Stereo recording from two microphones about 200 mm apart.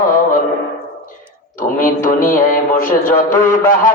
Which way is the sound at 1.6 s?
45° left (ahead or behind).